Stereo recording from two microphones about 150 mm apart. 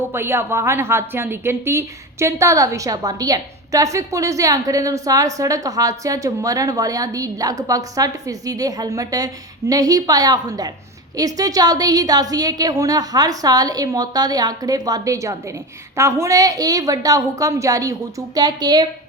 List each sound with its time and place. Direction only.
0.1 s a woman's voice: 15° right (ahead or behind)